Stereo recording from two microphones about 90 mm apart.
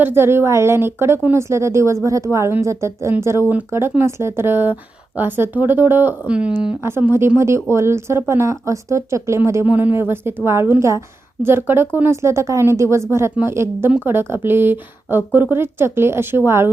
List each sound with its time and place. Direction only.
0.0 s a woman's voice: 25° right (ahead or behind)
6.2 s speech: 15° right (ahead or behind)
6.8 s a woman's voice: 25° right (ahead or behind)
9.6 s a woman's voice: 20° right (ahead or behind)